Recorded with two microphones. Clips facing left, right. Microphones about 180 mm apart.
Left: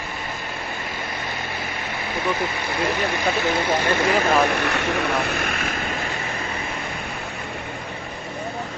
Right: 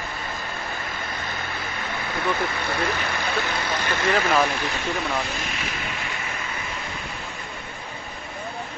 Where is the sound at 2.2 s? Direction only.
20° left (ahead or behind).